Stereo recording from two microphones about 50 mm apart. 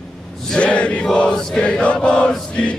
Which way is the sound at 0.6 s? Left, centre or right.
Left.